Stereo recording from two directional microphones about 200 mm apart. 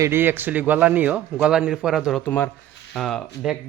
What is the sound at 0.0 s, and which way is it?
Speech, 10° right (ahead or behind).